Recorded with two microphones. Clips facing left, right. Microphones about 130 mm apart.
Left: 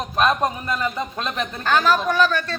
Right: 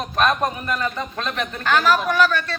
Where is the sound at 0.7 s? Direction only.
10° left (ahead or behind).